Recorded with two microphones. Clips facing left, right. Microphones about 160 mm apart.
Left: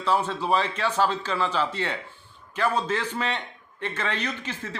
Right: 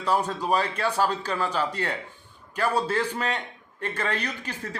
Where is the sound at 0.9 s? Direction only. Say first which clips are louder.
Left 1 dB; 10° right (ahead or behind).